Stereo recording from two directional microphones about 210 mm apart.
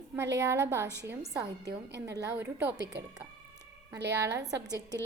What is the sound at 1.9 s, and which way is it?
Speech, 55° right (ahead or behind).